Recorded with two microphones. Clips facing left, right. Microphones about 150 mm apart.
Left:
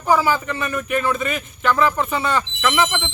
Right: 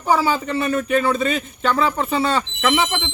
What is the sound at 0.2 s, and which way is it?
Speech, 30° right (ahead or behind).